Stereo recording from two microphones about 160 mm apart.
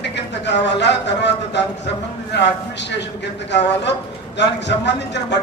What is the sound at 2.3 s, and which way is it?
Speech, 90° left.